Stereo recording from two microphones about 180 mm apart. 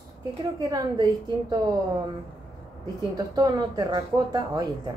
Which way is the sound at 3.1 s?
20° right (ahead or behind).